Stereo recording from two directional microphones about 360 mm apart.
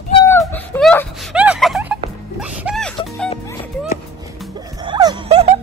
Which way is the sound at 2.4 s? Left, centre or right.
Centre.